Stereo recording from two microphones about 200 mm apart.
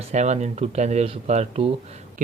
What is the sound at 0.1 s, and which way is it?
Speech, 35° right (ahead or behind).